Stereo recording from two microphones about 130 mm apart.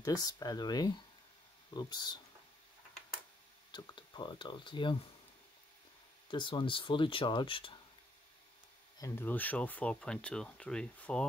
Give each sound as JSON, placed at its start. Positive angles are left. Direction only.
{"t": 0.0, "sound": "speech", "side_deg": 30}
{"t": 3.7, "sound": "speech", "side_deg": 35}
{"t": 6.3, "sound": "speech", "side_deg": 40}
{"t": 8.9, "sound": "speech", "side_deg": 20}